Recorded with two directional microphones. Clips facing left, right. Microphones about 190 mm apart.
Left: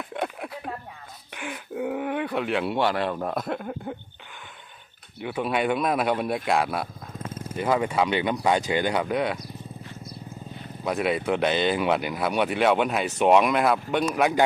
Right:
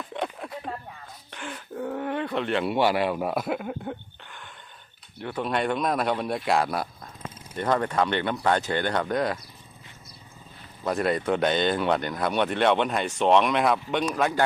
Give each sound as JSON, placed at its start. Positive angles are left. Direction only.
{"t": 0.1, "sound": "a sound", "side_deg": 5}
{"t": 1.3, "sound": "speech", "side_deg": 10}
{"t": 5.2, "sound": "speech", "side_deg": 5}
{"t": 7.3, "sound": "a sound", "side_deg": 50}
{"t": 7.5, "sound": "speech", "side_deg": 5}
{"t": 10.8, "sound": "speech", "side_deg": 5}